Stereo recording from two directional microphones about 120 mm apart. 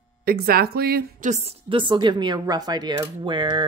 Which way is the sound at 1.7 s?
40° right (ahead or behind).